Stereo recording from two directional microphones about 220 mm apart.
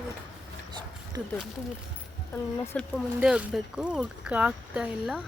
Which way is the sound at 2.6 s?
5° left (ahead or behind).